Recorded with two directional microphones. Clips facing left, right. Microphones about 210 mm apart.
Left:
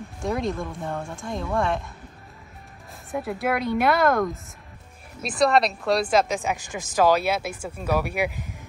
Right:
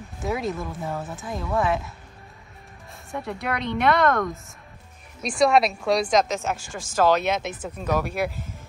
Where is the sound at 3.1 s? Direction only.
5° left (ahead or behind).